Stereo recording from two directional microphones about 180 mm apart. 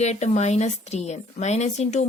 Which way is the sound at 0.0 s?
40° left (ahead or behind).